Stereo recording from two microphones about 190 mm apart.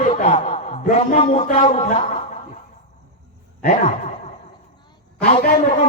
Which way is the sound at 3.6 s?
35° left (ahead or behind).